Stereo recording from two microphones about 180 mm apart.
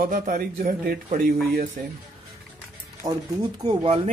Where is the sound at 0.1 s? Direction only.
45° right (ahead or behind).